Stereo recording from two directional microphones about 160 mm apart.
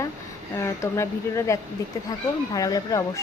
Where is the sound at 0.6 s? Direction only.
15° left (ahead or behind).